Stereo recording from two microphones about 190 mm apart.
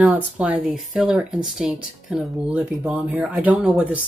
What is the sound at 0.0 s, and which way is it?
Speech, 5° right (ahead or behind).